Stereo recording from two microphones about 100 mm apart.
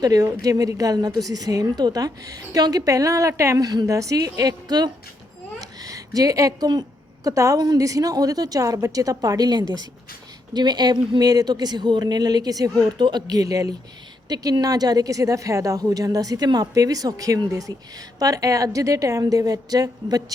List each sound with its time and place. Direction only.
0.0 s a woman's voice: 40° right (ahead or behind)
5.5 s a sound: 35° right (ahead or behind)
7.3 s a woman's voice: 35° right (ahead or behind)